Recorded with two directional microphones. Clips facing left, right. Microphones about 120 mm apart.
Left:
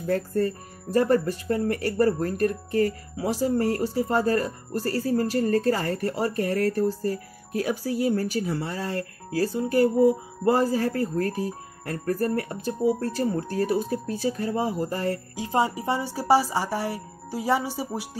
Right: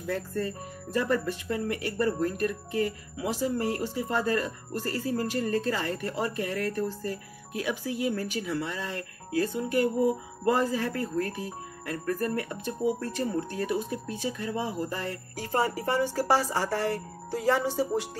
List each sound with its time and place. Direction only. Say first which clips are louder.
0.0 s speech: left 6 dB; 40° left (ahead or behind)
15.3 s speech: left 1 dB; 15° left (ahead or behind)